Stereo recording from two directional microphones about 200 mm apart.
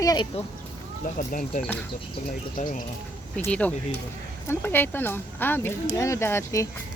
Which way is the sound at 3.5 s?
5° left (ahead or behind).